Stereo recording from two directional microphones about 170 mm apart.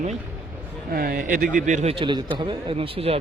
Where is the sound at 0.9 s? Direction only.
60° right (ahead or behind).